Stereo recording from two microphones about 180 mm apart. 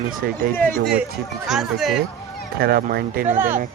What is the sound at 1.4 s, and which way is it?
Speech, centre (ahead or behind).